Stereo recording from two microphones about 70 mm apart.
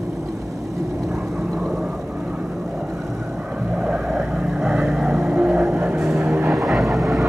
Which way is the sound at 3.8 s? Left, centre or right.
Centre.